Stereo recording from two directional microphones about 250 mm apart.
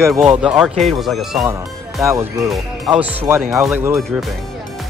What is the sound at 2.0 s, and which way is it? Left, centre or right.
Speech, centre.